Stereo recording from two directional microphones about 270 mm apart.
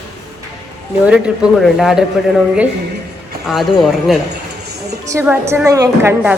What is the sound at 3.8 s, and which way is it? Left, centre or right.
A woman's voice, centre.